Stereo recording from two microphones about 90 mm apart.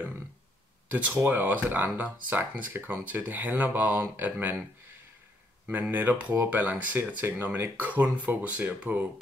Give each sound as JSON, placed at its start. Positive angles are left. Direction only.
{"t": 0.8, "sound": "speech", "side_deg": -20}
{"t": 5.7, "sound": "speech", "side_deg": -20}